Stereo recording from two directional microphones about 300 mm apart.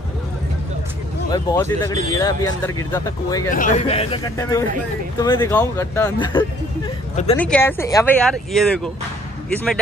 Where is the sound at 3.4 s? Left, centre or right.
Left.